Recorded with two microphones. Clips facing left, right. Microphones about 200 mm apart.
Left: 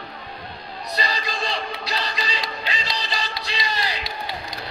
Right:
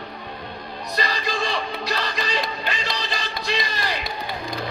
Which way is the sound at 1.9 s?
50° right (ahead or behind).